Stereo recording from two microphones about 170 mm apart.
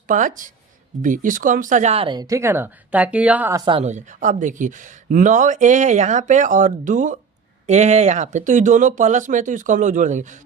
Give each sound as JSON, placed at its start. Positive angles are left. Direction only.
{"t": 0.1, "sound": "speech", "side_deg": -50}
{"t": 3.6, "sound": "speech", "side_deg": -30}
{"t": 3.8, "sound": "speech", "side_deg": -45}